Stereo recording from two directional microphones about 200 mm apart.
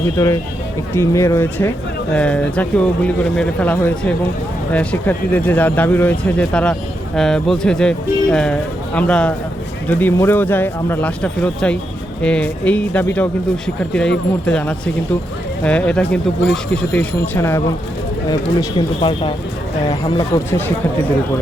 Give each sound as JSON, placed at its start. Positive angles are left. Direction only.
{"t": 0.2, "sound": "speech", "side_deg": 15}
{"t": 14.4, "sound": "speech", "side_deg": 5}
{"t": 18.8, "sound": "speech", "side_deg": 25}